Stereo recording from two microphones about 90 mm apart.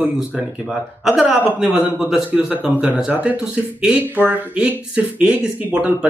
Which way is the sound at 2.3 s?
15° right (ahead or behind).